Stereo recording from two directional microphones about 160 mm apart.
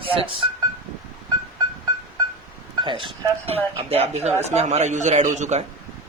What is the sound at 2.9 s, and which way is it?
A man's voice, 30° right (ahead or behind).